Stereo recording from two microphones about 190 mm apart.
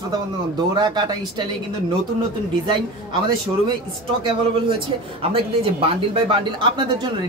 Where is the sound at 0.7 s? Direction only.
20° right (ahead or behind).